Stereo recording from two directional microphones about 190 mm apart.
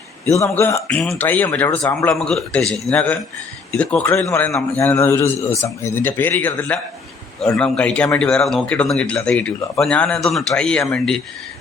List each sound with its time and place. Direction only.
0.3 s a man's voice: 15° left (ahead or behind)
0.9 s a man's voice: 5° left (ahead or behind)